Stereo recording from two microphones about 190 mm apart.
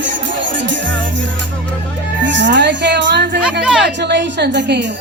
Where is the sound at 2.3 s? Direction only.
70° right (ahead or behind).